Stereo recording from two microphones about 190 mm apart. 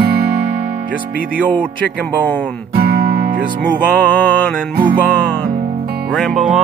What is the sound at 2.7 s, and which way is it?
Guitar, 55° right (ahead or behind).